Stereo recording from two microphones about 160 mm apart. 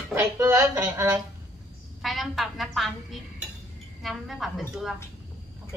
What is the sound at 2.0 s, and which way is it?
Speech, centre (ahead or behind).